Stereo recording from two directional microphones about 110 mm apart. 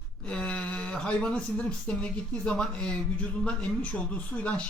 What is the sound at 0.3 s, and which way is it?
Speech, 10° left (ahead or behind).